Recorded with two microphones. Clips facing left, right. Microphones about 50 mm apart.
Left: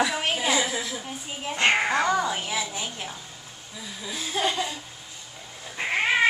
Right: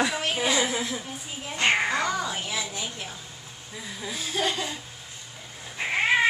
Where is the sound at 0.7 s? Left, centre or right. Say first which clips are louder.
Right 1 dB; right.